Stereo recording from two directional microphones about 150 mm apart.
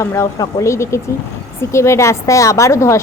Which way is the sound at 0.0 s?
20° left (ahead or behind).